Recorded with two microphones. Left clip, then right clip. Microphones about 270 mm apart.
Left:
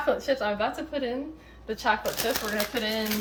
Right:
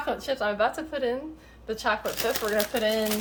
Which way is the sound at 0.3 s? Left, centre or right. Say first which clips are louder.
Right 1 dB; centre.